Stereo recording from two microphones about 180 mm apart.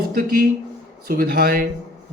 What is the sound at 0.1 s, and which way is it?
Speech, 55° right (ahead or behind).